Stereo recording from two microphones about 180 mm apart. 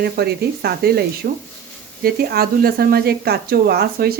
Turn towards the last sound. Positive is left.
turn(degrees=-60)  # may be behind; listen again after turning